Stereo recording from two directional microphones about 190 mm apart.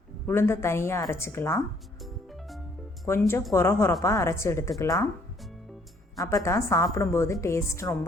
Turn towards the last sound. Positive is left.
turn(degrees=15)  # may be behind; listen again after turning